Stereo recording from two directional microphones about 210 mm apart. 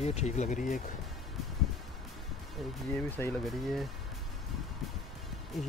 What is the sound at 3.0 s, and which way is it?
Speech, 10° left (ahead or behind).